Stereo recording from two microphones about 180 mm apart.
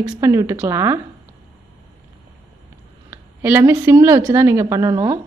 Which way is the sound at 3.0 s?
10° right (ahead or behind).